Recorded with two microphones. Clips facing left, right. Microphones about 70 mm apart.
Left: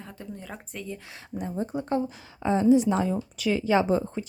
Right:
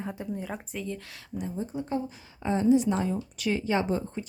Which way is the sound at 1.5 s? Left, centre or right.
Left.